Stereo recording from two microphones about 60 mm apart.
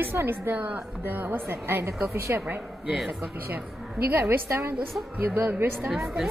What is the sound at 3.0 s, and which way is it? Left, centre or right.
Speech, centre.